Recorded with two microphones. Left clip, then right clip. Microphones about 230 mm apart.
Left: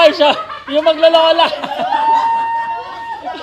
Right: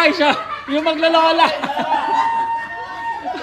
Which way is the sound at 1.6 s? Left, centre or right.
Right.